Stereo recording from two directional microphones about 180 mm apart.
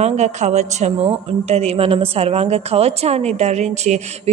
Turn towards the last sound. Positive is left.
turn(degrees=-40)  # may be behind; listen again after turning